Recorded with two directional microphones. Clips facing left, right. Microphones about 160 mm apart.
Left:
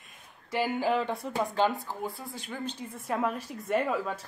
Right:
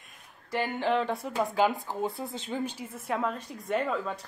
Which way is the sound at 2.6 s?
10° right (ahead or behind).